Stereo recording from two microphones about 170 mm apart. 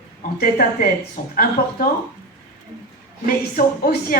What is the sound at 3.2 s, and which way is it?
Speech, 60° left (ahead or behind).